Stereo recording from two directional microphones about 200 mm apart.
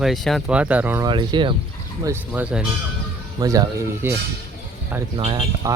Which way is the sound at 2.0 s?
10° right (ahead or behind).